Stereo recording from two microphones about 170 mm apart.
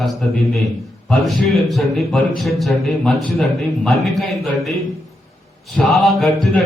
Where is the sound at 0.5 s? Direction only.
Centre (ahead or behind).